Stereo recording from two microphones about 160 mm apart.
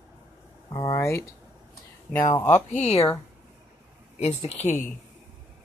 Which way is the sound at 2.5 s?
45° left (ahead or behind).